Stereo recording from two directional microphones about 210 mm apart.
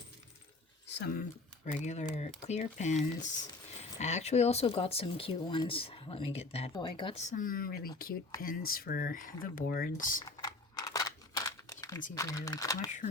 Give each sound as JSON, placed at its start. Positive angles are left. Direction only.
{"t": 0.9, "sound": "a sound", "side_deg": 55}
{"t": 1.6, "sound": "speech", "side_deg": 35}
{"t": 10.2, "sound": "crumpling", "side_deg": 15}
{"t": 12.1, "sound": "speech", "side_deg": 15}